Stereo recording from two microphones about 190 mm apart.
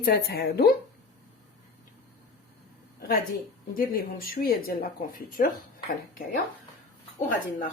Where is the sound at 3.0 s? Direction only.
55° left (ahead or behind).